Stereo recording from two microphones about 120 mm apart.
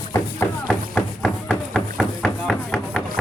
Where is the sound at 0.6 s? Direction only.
5° left (ahead or behind).